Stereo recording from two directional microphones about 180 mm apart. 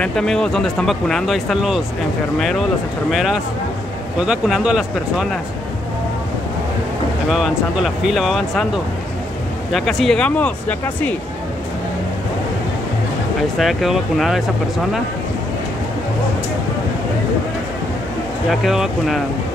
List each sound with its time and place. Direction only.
0.0 s speech: 5° left (ahead or behind)
3.1 s speech: centre (ahead or behind)
7.2 s speech: centre (ahead or behind)
9.7 s speech: centre (ahead or behind)
13.6 s speech: centre (ahead or behind)
18.5 s speech: centre (ahead or behind)